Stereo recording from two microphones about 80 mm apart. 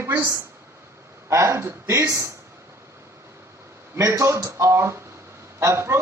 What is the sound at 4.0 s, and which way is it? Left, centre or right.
A man's voice, right.